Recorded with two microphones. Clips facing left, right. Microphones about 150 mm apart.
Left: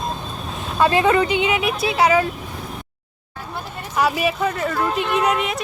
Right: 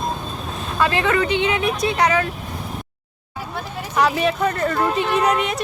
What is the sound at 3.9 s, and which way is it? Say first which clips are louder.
Speech: right 1 dB; 5° left (ahead or behind).